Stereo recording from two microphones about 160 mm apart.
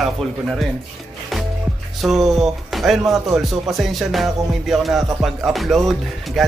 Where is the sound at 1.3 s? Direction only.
Centre (ahead or behind).